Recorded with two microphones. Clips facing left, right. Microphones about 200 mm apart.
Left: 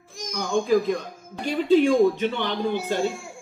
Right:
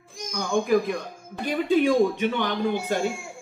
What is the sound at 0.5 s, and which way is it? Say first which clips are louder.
Speech: left 1 dB; 15° right (ahead or behind).